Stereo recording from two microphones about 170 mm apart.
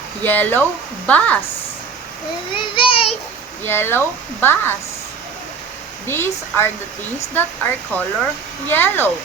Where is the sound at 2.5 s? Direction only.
30° left (ahead or behind).